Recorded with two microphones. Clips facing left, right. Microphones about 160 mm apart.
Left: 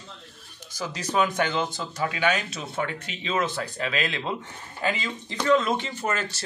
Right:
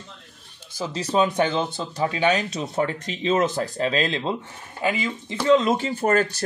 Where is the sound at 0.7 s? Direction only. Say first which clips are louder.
Right 4 dB; 25° right (ahead or behind).